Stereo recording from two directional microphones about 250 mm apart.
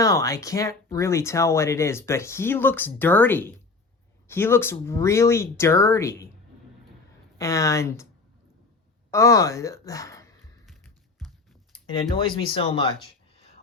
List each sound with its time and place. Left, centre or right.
0.0 s speech: centre
7.3 s speech: centre
9.0 s a woman's voice: centre
10.7 s a sound: centre
11.9 s speech: centre